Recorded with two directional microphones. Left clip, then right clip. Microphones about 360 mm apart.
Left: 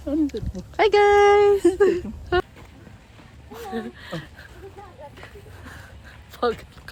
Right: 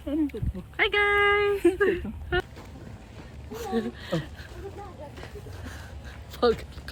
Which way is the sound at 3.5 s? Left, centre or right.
Centre.